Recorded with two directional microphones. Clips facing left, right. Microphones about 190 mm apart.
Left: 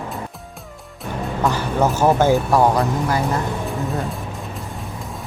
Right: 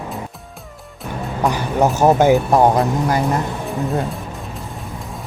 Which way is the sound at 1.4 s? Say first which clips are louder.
Right 2 dB; 15° right (ahead or behind).